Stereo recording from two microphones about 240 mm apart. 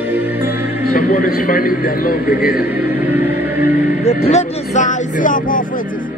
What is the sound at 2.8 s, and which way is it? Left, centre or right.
Music, centre.